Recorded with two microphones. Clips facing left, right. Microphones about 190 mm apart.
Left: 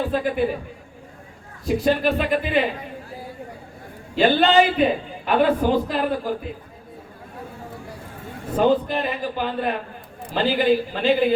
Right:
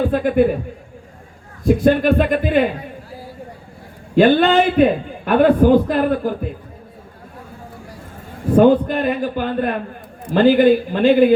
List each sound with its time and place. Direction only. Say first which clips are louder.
0.0 s a man's voice: right 6 dB; 55° right (ahead or behind)
1.6 s a man's voice: right 6 dB; 50° right (ahead or behind)
4.1 s a man's voice: right 4 dB; 50° right (ahead or behind)
8.5 s a man's voice: right 7 dB; 55° right (ahead or behind)